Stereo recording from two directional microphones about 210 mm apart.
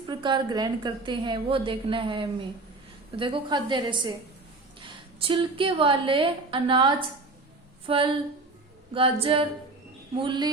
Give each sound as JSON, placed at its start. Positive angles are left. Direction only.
{"t": 0.1, "sound": "a woman's voice", "side_deg": -20}